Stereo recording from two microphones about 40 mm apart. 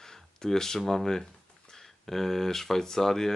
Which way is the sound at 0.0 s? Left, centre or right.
Centre.